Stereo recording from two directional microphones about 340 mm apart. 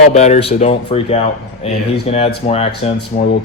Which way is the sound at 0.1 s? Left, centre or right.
Centre.